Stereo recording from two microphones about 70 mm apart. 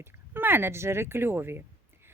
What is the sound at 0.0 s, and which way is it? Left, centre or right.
Speech, right.